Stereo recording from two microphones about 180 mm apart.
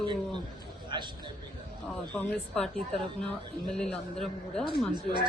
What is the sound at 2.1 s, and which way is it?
Speech, 5° left (ahead or behind).